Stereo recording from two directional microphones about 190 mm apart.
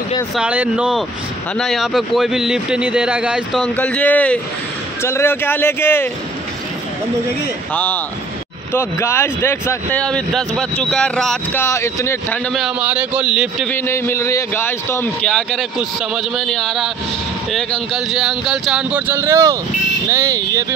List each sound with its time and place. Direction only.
0.4 s speech: 5° right (ahead or behind)
3.6 s a man's voice: 5° left (ahead or behind)
7.7 s a man's voice: 10° left (ahead or behind)
11.6 s a man's voice: 15° left (ahead or behind)
12.5 s speech: 5° right (ahead or behind)
13.7 s a man's voice: 15° left (ahead or behind); by 20.6 s 15° right (ahead or behind)